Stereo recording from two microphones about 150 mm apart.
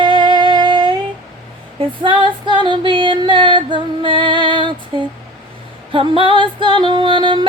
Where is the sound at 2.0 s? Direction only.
30° right (ahead or behind).